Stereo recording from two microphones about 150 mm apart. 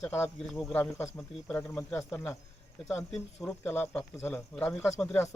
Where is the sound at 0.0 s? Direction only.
15° left (ahead or behind).